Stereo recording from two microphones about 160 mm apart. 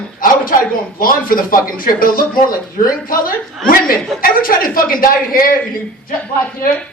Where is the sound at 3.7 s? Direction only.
65° left (ahead or behind).